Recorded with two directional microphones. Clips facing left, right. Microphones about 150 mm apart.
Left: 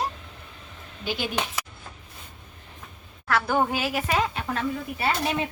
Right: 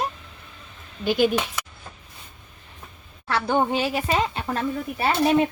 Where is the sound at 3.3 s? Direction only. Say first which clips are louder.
Right 2 dB; 25° right (ahead or behind).